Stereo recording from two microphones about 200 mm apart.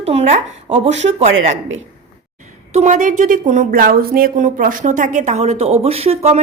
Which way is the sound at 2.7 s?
35° right (ahead or behind).